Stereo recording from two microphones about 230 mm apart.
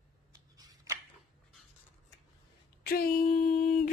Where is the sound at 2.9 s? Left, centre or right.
Left.